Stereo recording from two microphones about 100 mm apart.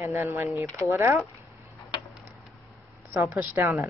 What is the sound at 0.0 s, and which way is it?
Speech, 30° right (ahead or behind).